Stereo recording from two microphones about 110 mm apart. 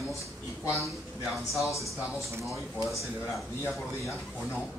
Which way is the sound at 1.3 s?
Centre (ahead or behind).